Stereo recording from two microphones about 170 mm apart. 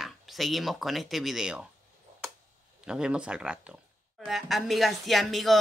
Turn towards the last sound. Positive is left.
turn(degrees=0)  # may be behind; listen again after turning